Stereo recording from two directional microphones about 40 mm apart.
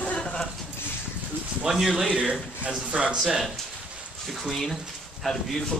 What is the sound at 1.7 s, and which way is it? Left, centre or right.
Speech, centre.